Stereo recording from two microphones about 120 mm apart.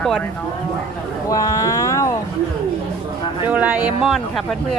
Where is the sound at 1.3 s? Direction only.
30° left (ahead or behind).